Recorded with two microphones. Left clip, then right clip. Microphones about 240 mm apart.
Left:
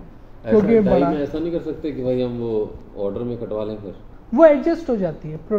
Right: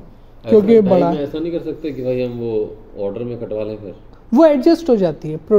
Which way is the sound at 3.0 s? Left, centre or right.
Left.